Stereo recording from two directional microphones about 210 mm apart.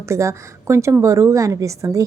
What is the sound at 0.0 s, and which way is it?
A woman's voice, 15° right (ahead or behind).